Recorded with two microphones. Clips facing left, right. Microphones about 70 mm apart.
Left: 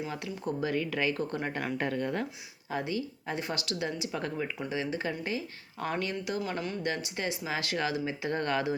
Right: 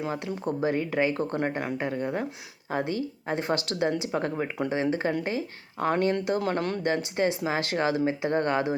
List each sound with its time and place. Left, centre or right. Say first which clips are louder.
0.4 s speech: right 4 dB; right; by 2.2 s centre
2.6 s speech: right 4 dB; right
6.4 s speech: right 7 dB; right
6.8 s speech: right 10 dB; right